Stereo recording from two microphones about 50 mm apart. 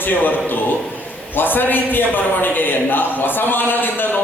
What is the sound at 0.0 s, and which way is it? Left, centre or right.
A man's voice, left.